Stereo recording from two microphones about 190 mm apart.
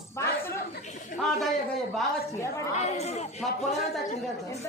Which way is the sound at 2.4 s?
15° left (ahead or behind).